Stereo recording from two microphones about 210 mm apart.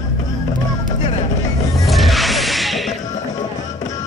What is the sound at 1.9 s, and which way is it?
Music, centre (ahead or behind).